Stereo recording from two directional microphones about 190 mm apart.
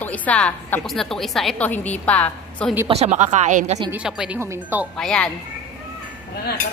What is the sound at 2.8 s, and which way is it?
Speech, 35° right (ahead or behind).